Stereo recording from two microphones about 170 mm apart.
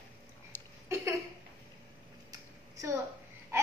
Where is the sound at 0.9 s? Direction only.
15° right (ahead or behind).